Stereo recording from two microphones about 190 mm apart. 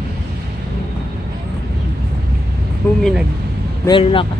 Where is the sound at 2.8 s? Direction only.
10° left (ahead or behind).